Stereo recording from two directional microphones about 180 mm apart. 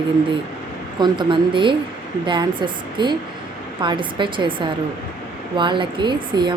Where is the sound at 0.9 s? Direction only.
25° right (ahead or behind).